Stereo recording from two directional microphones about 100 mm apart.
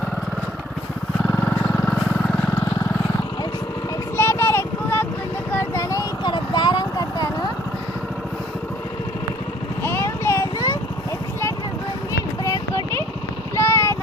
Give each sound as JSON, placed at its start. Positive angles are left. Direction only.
{"t": 1.3, "sound": "vehicle", "side_deg": 15}
{"t": 4.2, "sound": "a sound", "side_deg": 25}
{"t": 5.5, "sound": "vehicle", "side_deg": 25}
{"t": 6.2, "sound": "vehicle", "side_deg": 50}
{"t": 9.8, "sound": "vehicle", "side_deg": 25}
{"t": 13.6, "sound": "vehicle", "side_deg": 25}